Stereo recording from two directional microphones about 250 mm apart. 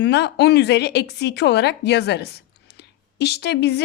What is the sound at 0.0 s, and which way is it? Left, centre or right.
A woman's voice, left.